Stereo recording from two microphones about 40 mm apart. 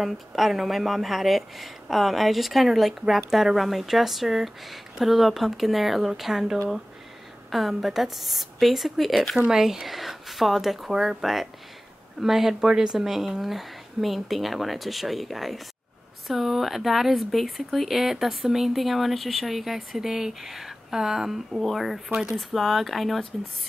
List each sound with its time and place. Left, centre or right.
0.0 s speech: centre
21.5 s speech: centre